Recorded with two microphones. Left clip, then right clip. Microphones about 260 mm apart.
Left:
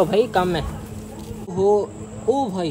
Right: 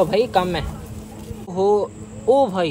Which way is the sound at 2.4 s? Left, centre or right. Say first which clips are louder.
Right 5 dB; right.